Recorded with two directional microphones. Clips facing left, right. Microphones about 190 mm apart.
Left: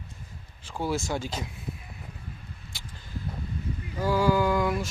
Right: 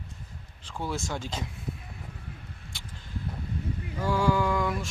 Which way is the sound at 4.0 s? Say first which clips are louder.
Left 2 dB; 5° left (ahead or behind).